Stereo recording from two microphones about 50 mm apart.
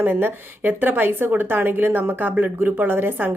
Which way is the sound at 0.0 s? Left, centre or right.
Right.